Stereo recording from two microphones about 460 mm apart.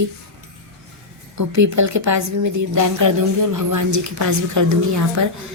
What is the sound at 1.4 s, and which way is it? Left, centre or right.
A woman's voice, right.